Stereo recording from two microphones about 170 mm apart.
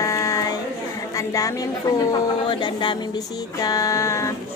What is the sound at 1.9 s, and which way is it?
Music, 25° left (ahead or behind).